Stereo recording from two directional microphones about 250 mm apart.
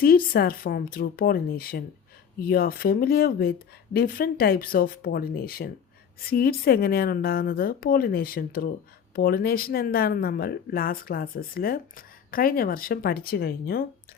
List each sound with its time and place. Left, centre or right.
0.0 s speech: left